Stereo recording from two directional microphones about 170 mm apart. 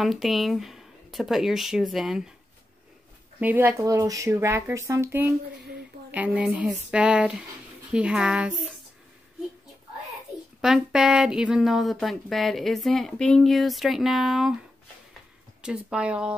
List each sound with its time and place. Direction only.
0.0 s speech: centre (ahead or behind)
3.3 s speech: 10° right (ahead or behind)
10.6 s speech: centre (ahead or behind)
15.6 s speech: 5° right (ahead or behind)